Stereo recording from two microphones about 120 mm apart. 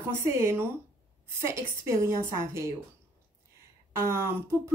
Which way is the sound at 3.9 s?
20° right (ahead or behind).